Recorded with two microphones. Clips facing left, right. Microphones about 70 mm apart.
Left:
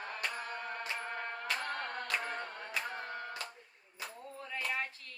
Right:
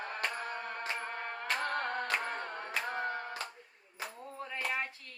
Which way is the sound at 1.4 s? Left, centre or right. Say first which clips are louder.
Right 6 dB; right.